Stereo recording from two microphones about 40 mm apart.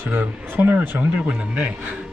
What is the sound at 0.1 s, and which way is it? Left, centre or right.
Speech, right.